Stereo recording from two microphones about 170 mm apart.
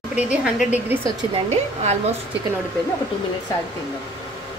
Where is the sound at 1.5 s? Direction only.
40° right (ahead or behind).